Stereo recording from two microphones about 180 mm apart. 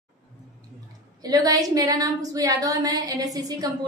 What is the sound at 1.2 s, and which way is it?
A woman's voice, 20° right (ahead or behind).